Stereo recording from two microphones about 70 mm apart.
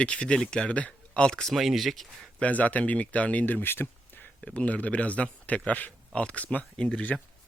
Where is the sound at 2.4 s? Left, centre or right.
Left.